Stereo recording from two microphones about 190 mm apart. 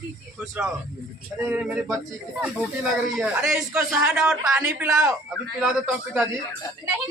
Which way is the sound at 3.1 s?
5° right (ahead or behind).